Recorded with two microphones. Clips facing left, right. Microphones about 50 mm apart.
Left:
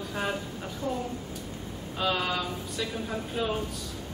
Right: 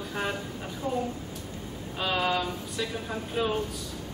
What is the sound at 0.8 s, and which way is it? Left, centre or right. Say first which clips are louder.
Speech: right 1 dB; right.